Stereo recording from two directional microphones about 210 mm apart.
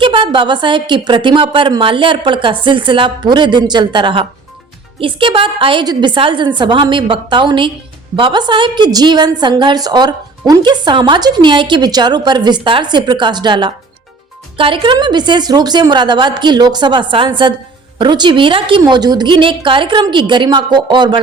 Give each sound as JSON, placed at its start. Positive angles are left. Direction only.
{"t": 0.0, "sound": "a woman's voice", "side_deg": -25}